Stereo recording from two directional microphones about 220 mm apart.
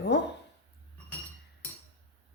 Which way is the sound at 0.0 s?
50° left (ahead or behind).